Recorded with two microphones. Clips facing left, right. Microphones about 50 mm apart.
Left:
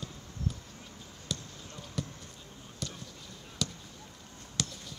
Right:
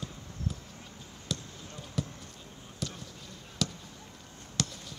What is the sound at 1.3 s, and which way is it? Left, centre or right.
Basketball bounce, centre.